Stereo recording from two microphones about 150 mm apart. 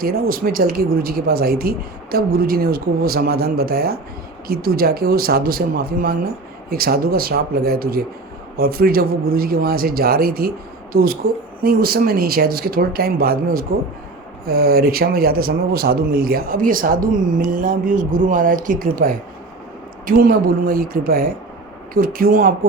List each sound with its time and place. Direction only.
0.0 s speech: 75° right (ahead or behind)